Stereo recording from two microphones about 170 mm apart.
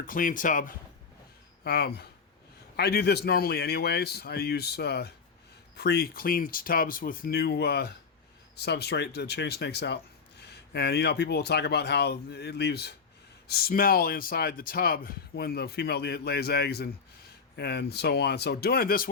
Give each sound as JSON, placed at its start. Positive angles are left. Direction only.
{"t": 0.0, "sound": "speech", "side_deg": 50}
{"t": 1.6, "sound": "speech", "side_deg": 70}